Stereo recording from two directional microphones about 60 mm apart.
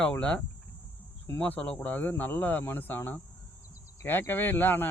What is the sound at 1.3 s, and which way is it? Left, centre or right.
Speech, left.